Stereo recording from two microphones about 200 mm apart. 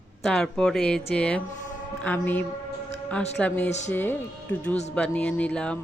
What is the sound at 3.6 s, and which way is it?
Speech, 35° left (ahead or behind).